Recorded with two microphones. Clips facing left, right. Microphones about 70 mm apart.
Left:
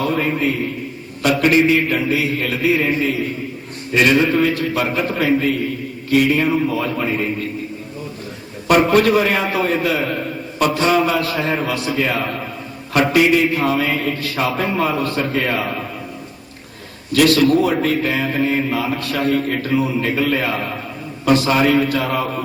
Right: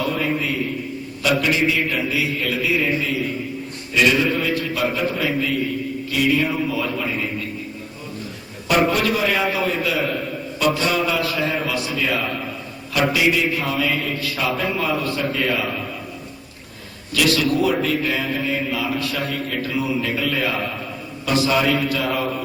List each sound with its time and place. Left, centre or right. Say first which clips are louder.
0.0 s a man's voice: left 4 dB; left
8.6 s a man's voice: left 5 dB; left
17.1 s a man's voice: left 6 dB; left